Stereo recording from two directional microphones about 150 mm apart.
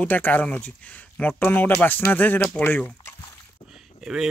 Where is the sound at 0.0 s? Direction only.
10° left (ahead or behind).